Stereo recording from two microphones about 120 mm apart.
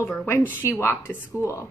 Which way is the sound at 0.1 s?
15° left (ahead or behind).